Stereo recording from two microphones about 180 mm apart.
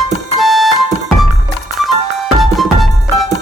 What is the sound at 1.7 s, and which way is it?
Music, centre (ahead or behind).